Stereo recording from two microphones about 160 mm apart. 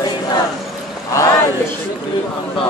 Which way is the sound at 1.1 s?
20° left (ahead or behind).